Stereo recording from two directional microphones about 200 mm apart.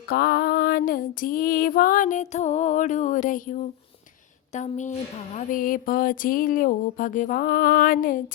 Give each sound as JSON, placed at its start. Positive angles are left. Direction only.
{"t": 0.1, "sound": "speech", "side_deg": 50}